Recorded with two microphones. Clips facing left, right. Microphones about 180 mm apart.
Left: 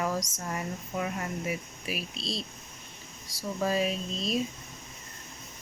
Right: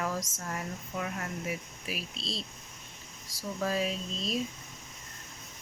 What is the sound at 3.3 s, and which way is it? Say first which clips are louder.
Speech: left 3 dB; centre (ahead or behind).